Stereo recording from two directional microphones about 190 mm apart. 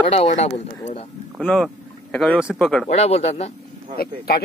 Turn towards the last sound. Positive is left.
turn(degrees=55)  # may be behind; listen again after turning